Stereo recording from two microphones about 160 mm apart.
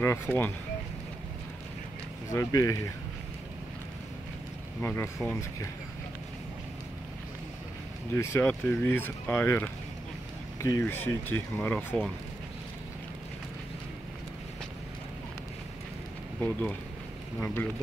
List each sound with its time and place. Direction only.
0.0 s speech: 15° left (ahead or behind)
2.3 s speech: 20° left (ahead or behind)
4.8 s speech: 15° left (ahead or behind)
8.1 s speech: 15° left (ahead or behind)
16.3 s speech: 10° left (ahead or behind)